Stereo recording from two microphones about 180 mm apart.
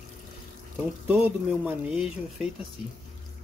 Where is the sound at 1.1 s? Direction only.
5° right (ahead or behind).